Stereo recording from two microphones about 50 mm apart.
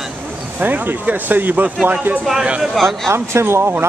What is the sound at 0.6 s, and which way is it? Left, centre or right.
Speech, right.